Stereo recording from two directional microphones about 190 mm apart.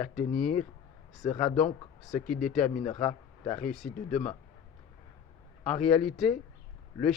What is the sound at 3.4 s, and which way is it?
Speech, 5° left (ahead or behind).